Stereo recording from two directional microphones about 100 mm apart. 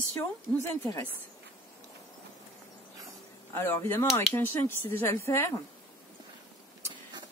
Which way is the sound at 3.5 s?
25° left (ahead or behind).